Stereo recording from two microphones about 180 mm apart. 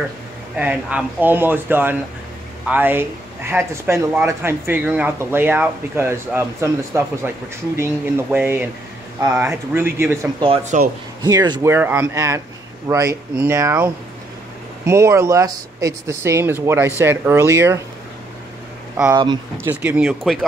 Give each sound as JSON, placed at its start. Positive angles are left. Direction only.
{"t": 0.6, "sound": "speech", "side_deg": -10}
{"t": 10.4, "sound": "speech", "side_deg": -35}
{"t": 11.2, "sound": "speech", "side_deg": -20}
{"t": 14.9, "sound": "speech", "side_deg": -15}
{"t": 19.5, "sound": "speech", "side_deg": -10}